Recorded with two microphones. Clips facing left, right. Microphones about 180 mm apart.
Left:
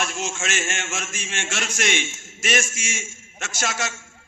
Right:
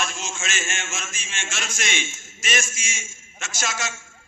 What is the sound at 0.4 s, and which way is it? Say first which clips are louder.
A man's voice: left 3 dB; 65° left (ahead or behind).